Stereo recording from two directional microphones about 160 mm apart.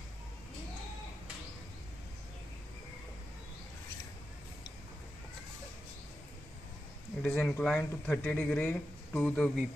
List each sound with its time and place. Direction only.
7.2 s speech: 5° left (ahead or behind)